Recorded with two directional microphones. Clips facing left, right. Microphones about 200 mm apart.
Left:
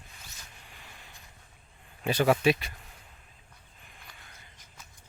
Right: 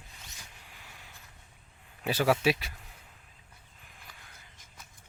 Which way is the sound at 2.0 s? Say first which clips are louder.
Left 2 dB; 5° right (ahead or behind).